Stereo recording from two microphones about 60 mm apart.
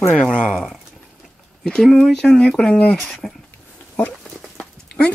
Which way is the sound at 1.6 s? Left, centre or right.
Centre.